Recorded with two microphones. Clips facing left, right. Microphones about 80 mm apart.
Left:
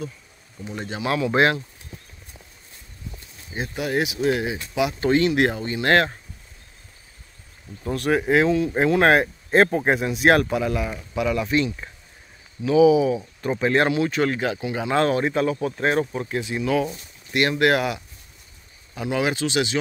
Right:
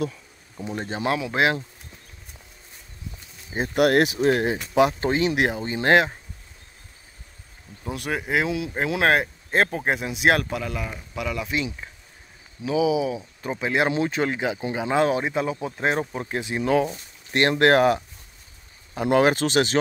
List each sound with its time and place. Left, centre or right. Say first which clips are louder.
0.7 s speech: right 1 dB; right
1.1 s speech: left 4 dB; centre
3.7 s speech: right 7 dB; right
4.0 s speech: right 2 dB; right
5.0 s speech: left 3 dB; centre
7.8 s speech: left 7 dB; centre
12.6 s speech: left 6 dB; centre
13.8 s speech: left 2 dB; right
17.3 s speech: right 1 dB; right